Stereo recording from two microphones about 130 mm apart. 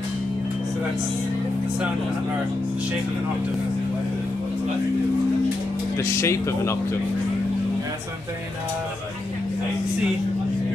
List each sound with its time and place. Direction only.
5.9 s speech: 20° left (ahead or behind)